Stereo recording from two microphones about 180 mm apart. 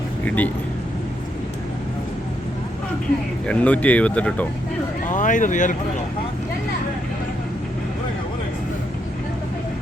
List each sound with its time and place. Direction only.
0.3 s speech: 10° left (ahead or behind)
3.4 s speech: 5° left (ahead or behind)
5.0 s speech: 45° left (ahead or behind)